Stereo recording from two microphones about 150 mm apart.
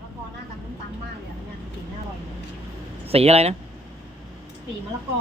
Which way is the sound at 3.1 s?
40° right (ahead or behind).